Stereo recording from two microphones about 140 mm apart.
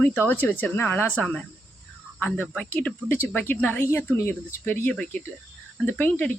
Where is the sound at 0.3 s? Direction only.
10° left (ahead or behind).